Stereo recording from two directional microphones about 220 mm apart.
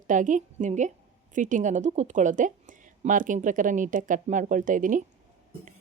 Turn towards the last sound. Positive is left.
turn(degrees=-35)  # may be behind; listen again after turning